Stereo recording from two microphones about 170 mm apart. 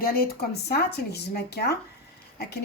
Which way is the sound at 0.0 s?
60° left (ahead or behind).